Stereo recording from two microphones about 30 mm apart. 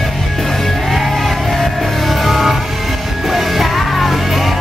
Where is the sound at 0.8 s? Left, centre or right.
Centre.